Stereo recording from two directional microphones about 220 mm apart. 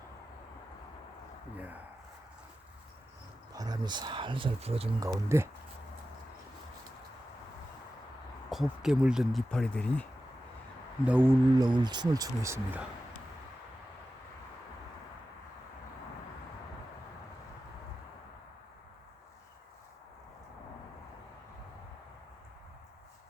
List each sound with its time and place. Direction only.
1.5 s speech: 5° right (ahead or behind)
3.5 s speech: 15° right (ahead or behind)
5.0 s speech: 15° right (ahead or behind)
8.4 s speech: centre (ahead or behind)
11.0 s speech: 5° right (ahead or behind)